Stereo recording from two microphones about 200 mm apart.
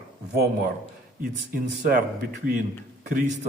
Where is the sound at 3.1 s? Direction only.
40° right (ahead or behind).